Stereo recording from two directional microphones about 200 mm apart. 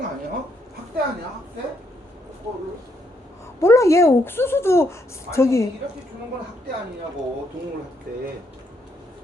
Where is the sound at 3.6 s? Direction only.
15° left (ahead or behind).